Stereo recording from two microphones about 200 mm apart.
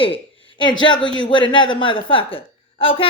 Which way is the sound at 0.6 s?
25° left (ahead or behind).